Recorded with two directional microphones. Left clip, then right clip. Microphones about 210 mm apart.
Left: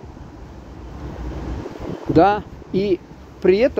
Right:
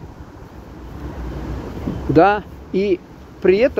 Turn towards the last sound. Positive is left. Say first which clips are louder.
# right 1 dB
turn(degrees=15)  # may be behind; listen again after turning